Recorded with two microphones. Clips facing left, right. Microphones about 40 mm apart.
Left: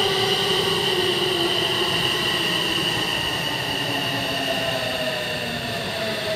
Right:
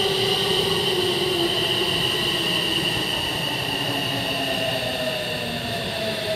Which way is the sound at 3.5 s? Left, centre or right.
Centre.